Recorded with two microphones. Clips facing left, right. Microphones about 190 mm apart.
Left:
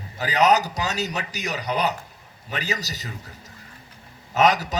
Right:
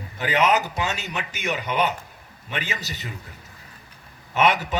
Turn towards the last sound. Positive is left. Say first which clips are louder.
# left 1 dB
turn(degrees=40)  # may be behind; listen again after turning